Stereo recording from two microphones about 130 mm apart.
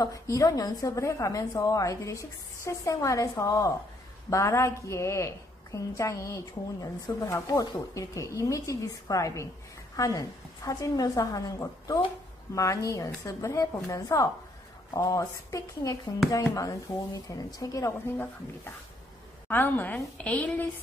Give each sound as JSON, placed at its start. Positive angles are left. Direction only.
{"t": 0.0, "sound": "a woman's voice", "side_deg": 25}
{"t": 17.3, "sound": "a woman's voice", "side_deg": 25}
{"t": 18.1, "sound": "a woman's voice", "side_deg": 15}